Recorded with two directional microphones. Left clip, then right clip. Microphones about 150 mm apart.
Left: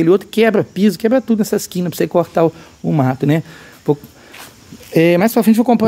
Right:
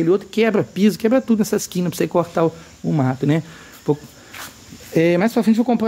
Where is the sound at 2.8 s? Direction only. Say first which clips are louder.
Left 4 dB; 55° left (ahead or behind).